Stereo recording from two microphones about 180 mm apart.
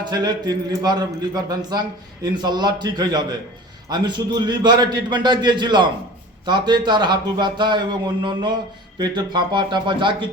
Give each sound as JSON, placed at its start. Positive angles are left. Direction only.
{"t": 0.0, "sound": "a man's voice", "side_deg": -20}